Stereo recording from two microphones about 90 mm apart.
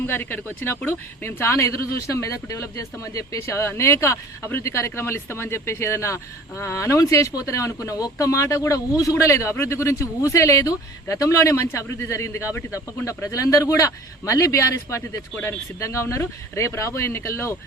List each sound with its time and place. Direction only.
0.0 s speech: 25° left (ahead or behind)